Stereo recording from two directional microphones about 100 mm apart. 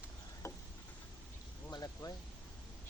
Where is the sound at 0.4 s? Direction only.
30° left (ahead or behind).